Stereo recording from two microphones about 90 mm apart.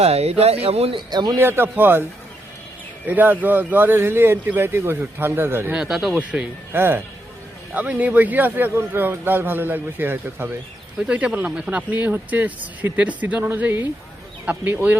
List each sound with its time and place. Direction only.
0.5 s speech: 90° right
1.1 s speech: 50° right (ahead or behind)
1.4 s speech: 25° right (ahead or behind)
3.1 s speech: 20° right (ahead or behind)
5.7 s speech: 5° right (ahead or behind)
6.1 s speech: 15° right (ahead or behind)